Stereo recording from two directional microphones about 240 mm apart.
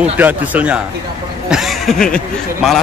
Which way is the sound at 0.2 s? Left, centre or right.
Centre.